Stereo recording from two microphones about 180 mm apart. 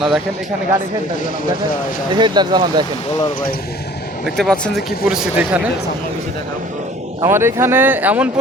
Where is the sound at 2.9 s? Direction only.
25° left (ahead or behind).